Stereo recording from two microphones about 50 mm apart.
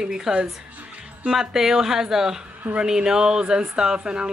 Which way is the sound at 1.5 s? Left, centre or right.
Centre.